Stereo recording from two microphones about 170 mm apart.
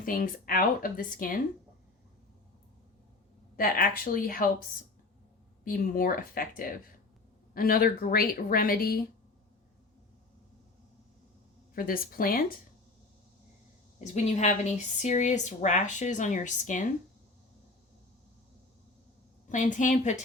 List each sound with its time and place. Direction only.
0.0 s speech: 55° left (ahead or behind)
3.6 s speech: 60° left (ahead or behind)
5.6 s speech: 55° left (ahead or behind)
11.7 s speech: 60° left (ahead or behind)
14.0 s speech: 45° left (ahead or behind)
19.5 s speech: 50° left (ahead or behind)